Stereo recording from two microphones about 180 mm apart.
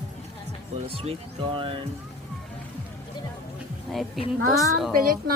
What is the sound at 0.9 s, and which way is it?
Speech, 30° right (ahead or behind).